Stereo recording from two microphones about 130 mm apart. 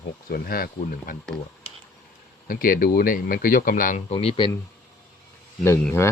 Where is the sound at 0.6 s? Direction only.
90° left.